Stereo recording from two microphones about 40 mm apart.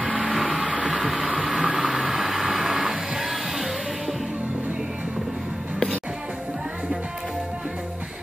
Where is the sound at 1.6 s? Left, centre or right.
Centre.